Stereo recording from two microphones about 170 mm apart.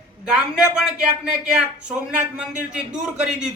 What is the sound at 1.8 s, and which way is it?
Speech, 5° right (ahead or behind).